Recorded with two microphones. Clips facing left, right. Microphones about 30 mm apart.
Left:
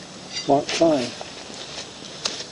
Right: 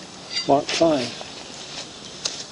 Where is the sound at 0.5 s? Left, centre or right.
Centre.